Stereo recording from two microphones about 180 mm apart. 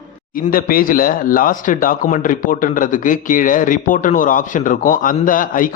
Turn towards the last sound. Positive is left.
turn(degrees=50)  # may be behind; listen again after turning